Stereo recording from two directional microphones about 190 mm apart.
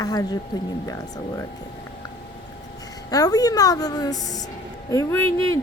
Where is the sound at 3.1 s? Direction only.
20° left (ahead or behind).